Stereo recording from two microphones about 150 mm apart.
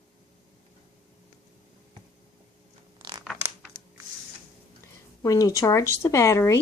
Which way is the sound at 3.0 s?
30° right (ahead or behind).